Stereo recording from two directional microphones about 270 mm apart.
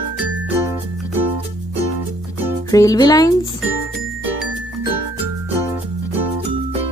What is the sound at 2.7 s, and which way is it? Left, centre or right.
Speech, centre.